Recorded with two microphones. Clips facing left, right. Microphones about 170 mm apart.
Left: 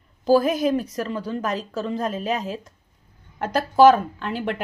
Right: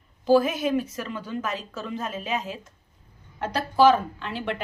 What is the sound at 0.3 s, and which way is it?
A woman's voice, 40° left (ahead or behind).